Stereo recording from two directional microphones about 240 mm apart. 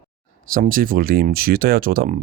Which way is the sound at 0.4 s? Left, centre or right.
Right.